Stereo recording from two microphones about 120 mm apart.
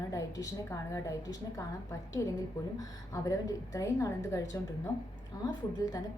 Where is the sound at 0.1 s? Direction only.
25° left (ahead or behind).